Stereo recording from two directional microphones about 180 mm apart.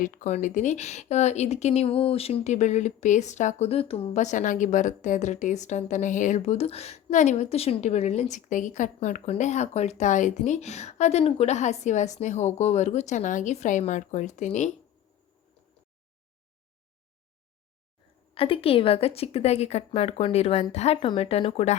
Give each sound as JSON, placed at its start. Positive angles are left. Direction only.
{"t": 0.0, "sound": "speech", "side_deg": 45}
{"t": 18.3, "sound": "speech", "side_deg": 30}